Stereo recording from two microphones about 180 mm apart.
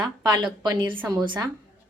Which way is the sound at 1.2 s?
25° right (ahead or behind).